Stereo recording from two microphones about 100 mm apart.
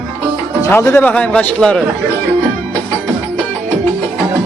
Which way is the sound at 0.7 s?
25° left (ahead or behind).